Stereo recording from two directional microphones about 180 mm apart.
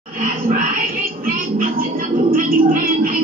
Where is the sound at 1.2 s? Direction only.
50° right (ahead or behind).